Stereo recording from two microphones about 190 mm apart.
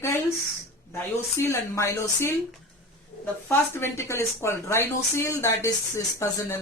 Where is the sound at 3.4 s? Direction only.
15° left (ahead or behind).